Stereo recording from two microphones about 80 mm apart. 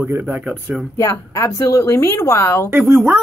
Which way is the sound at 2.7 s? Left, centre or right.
Right.